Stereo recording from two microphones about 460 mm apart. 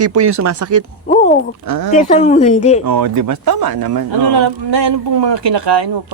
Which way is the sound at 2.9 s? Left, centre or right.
Right.